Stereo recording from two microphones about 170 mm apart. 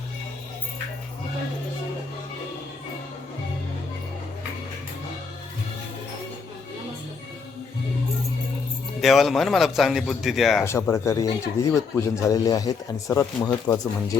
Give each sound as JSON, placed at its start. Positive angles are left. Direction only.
{"t": 9.0, "sound": "speech", "side_deg": 0}
{"t": 10.6, "sound": "speech", "side_deg": 15}